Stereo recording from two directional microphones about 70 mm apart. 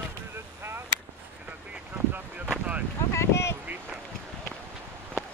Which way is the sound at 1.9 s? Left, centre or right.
Right.